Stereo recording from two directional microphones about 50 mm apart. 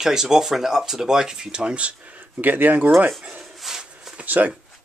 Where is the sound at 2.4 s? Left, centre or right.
Right.